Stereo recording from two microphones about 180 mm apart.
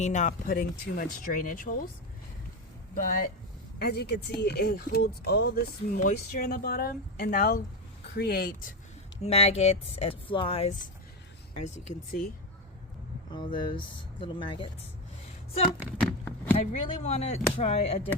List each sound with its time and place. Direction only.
0.0 s speech: 40° left (ahead or behind)
2.9 s speech: 50° left (ahead or behind)
3.8 s speech: 65° left (ahead or behind)
6.0 s speech: 45° left (ahead or behind)
9.2 s speech: 35° left (ahead or behind)
13.3 s speech: 25° left (ahead or behind)
16.0 s a sound: 10° left (ahead or behind)
16.6 s speech: 35° left (ahead or behind)